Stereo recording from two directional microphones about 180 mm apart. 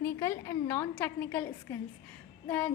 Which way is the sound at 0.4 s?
15° left (ahead or behind).